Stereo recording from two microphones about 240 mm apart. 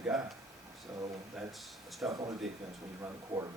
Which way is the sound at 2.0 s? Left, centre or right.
Centre.